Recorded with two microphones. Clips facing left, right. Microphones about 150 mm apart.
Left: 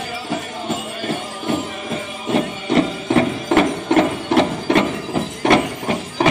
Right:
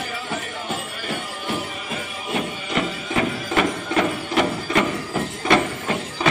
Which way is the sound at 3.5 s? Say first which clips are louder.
Left 7 dB; 70° left (ahead or behind).